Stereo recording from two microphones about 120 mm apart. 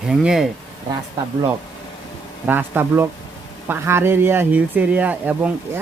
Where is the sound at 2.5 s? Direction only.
20° right (ahead or behind).